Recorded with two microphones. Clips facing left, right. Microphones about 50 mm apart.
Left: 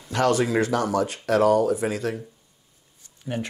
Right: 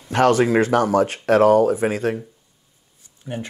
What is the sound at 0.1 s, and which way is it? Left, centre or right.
Speech, right.